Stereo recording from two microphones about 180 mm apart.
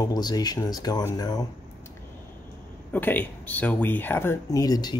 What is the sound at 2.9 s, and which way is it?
Speech, 10° left (ahead or behind).